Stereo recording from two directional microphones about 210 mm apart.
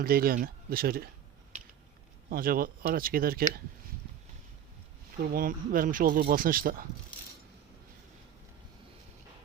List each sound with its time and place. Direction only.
0.0 s speech: 45° right (ahead or behind)
2.3 s speech: 45° right (ahead or behind)
5.2 s speech: 45° right (ahead or behind)